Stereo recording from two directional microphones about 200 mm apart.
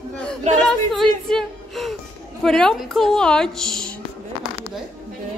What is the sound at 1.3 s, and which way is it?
A woman's voice, centre (ahead or behind).